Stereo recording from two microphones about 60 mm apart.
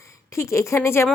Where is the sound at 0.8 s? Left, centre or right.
Left.